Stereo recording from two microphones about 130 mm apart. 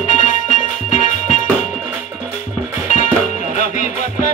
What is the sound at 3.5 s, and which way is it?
Music, 75° left (ahead or behind).